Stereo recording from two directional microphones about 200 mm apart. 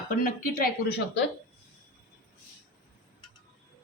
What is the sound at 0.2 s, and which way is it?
Speech, 45° left (ahead or behind).